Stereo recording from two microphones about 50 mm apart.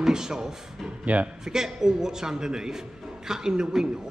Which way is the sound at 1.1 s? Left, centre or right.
Right.